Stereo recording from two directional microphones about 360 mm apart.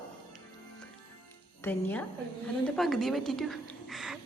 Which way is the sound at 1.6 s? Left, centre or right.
Centre.